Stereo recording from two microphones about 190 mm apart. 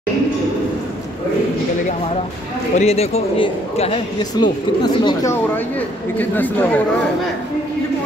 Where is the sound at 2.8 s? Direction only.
35° left (ahead or behind); by 6.8 s 10° left (ahead or behind).